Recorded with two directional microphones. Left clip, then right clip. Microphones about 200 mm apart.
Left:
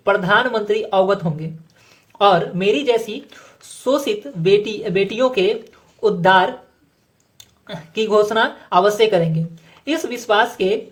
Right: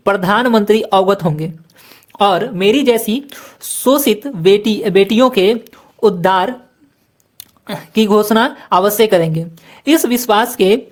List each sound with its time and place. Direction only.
0.0 s a woman's voice: 45° right (ahead or behind)